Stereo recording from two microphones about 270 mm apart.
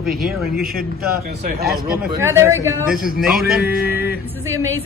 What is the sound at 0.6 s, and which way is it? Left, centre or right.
Speech, right.